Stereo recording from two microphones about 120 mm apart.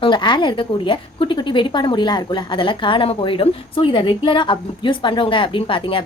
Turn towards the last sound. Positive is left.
turn(degrees=45)  # may be behind; listen again after turning